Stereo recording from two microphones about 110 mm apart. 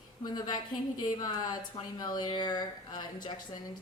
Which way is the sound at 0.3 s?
40° left (ahead or behind).